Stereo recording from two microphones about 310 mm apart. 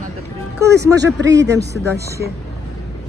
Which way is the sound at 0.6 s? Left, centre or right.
Centre.